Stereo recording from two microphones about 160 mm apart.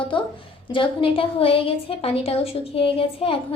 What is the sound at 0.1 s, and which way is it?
A woman's voice, 30° left (ahead or behind).